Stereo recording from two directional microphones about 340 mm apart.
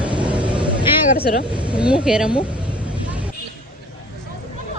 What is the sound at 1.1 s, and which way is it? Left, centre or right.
Speech, left.